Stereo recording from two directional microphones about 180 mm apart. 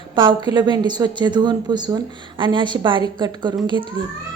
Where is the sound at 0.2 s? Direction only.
25° right (ahead or behind).